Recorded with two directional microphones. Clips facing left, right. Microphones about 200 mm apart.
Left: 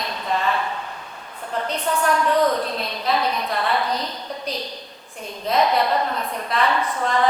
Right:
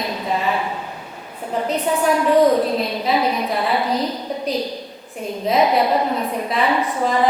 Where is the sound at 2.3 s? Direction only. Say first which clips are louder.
Right 7 dB; 20° right (ahead or behind).